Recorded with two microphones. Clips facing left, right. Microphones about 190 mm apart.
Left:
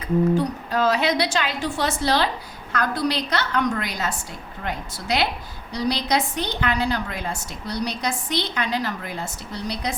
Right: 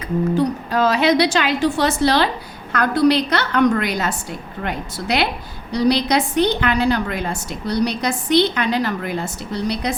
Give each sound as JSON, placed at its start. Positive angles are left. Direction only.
{"t": 0.3, "sound": "a woman's voice", "side_deg": -85}